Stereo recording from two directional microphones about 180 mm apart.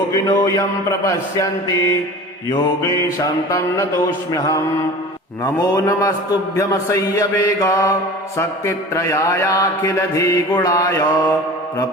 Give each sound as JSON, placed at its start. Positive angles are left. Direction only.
{"t": 0.3, "sound": "mantra", "side_deg": 20}